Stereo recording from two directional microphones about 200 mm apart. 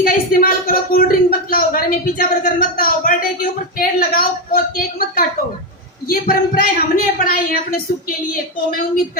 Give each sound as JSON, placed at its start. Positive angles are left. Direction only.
{"t": 0.0, "sound": "a woman's voice", "side_deg": 45}